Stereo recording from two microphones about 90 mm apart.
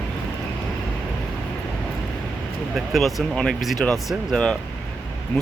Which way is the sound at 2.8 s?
Centre (ahead or behind).